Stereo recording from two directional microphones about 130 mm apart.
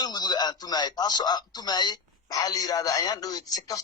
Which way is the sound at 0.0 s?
30° left (ahead or behind).